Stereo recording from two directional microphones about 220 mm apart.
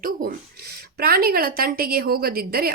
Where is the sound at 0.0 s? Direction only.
40° right (ahead or behind).